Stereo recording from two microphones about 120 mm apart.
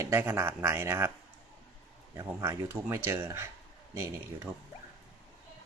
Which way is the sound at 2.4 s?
20° right (ahead or behind).